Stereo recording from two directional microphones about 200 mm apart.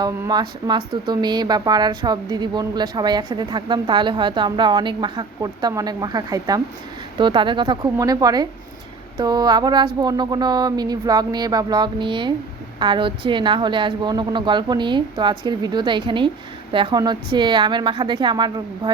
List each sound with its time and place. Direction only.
0.0 s speech: 20° right (ahead or behind)